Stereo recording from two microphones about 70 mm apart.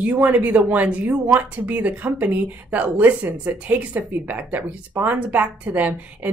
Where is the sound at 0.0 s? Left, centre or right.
Right.